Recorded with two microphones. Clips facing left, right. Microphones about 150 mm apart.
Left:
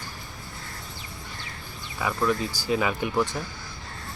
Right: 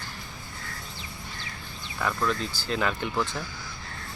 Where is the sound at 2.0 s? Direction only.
10° left (ahead or behind).